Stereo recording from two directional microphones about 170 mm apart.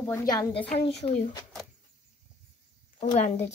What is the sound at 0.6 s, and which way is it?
Speech, 35° left (ahead or behind).